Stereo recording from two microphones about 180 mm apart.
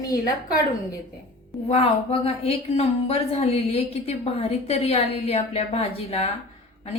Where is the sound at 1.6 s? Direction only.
35° left (ahead or behind).